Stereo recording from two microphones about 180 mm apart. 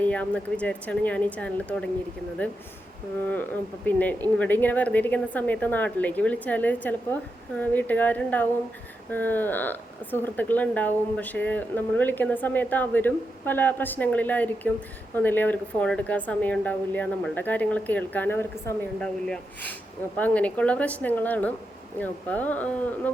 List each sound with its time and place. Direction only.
0.0 s speech: 5° left (ahead or behind)
3.2 s speech: 10° left (ahead or behind)